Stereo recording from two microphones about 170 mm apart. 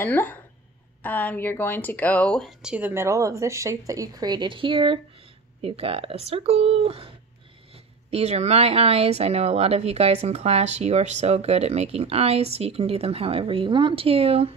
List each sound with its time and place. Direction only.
0.0 s speech: 10° left (ahead or behind); by 14.5 s 35° right (ahead or behind)